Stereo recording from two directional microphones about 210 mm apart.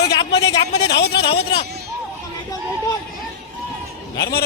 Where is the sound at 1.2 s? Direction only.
25° left (ahead or behind).